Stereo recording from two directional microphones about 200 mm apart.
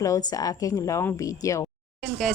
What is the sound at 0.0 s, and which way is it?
A woman's voice, 20° left (ahead or behind).